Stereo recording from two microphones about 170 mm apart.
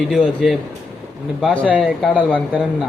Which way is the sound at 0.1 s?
Centre (ahead or behind).